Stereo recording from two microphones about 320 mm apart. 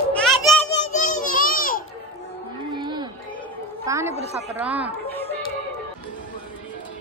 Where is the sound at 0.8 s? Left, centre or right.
Left.